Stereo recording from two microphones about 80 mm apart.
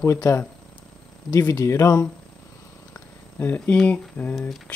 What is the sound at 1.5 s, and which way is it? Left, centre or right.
Speech, left.